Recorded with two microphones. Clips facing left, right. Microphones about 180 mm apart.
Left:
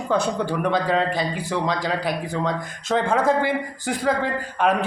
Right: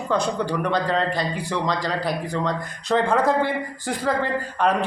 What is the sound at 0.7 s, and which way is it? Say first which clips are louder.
A man's voice: left 3 dB; 5° left (ahead or behind).